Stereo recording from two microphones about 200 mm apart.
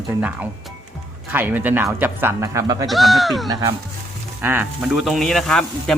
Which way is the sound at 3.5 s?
20° right (ahead or behind).